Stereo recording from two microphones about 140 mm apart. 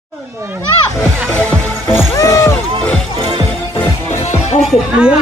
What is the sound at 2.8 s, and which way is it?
Music, 5° left (ahead or behind).